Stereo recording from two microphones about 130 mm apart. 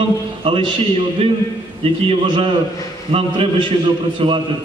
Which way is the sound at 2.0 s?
40° right (ahead or behind).